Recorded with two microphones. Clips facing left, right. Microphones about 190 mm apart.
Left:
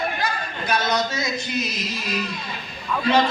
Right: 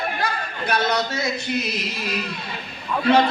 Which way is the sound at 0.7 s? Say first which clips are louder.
Right 1 dB; 60° right (ahead or behind).